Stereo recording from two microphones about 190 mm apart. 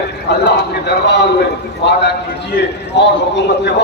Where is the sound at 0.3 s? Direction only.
60° left (ahead or behind).